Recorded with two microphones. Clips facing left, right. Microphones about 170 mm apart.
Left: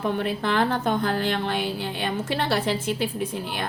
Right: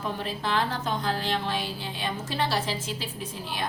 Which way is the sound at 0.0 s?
60° left (ahead or behind).